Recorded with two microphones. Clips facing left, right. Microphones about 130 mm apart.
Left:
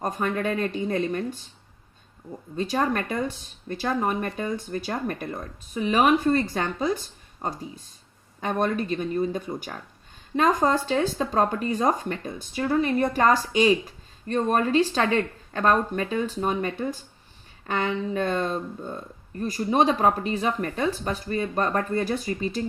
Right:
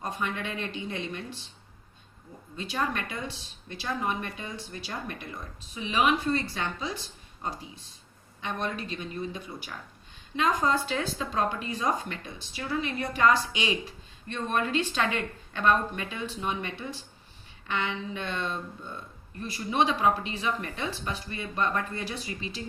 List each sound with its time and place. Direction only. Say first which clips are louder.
0.0 s speech: left 7 dB; 45° left (ahead or behind)
2.6 s speech: left 6 dB; 40° left (ahead or behind)